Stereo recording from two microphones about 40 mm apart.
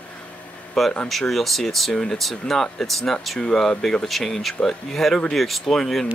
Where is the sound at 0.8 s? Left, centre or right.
Centre.